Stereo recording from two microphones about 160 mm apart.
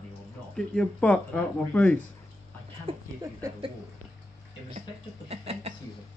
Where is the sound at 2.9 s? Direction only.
35° right (ahead or behind).